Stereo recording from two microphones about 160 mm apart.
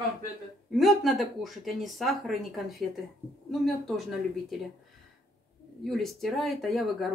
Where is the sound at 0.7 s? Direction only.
Centre (ahead or behind).